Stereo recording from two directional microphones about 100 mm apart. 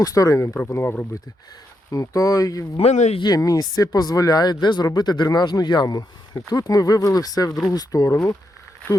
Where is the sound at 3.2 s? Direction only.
40° left (ahead or behind).